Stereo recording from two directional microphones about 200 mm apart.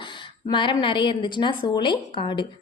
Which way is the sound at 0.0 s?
25° left (ahead or behind).